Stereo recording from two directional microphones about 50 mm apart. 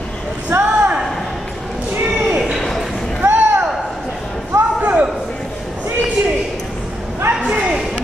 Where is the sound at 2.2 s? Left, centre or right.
Centre.